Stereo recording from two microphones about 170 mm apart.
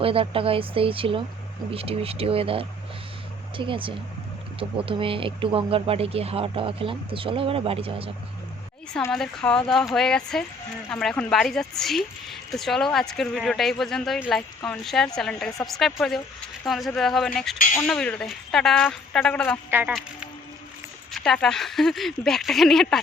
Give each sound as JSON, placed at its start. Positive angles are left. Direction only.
{"t": 0.0, "sound": "speech", "side_deg": -35}
{"t": 9.1, "sound": "speech", "side_deg": 5}